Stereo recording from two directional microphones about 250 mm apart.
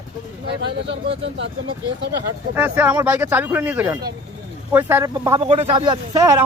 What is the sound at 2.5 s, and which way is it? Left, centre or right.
Speech, centre.